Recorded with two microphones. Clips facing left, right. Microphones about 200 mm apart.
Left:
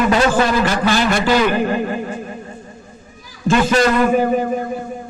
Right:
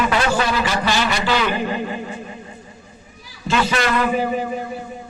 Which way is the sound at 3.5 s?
45° left (ahead or behind).